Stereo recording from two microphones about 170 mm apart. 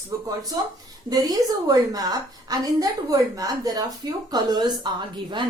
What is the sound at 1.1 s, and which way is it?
A woman's voice, 20° right (ahead or behind).